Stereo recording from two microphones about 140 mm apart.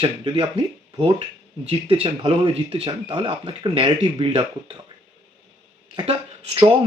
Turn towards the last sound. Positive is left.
turn(degrees=-40)  # may be behind; listen again after turning